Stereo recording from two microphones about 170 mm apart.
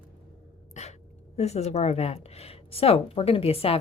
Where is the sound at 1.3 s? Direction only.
40° left (ahead or behind).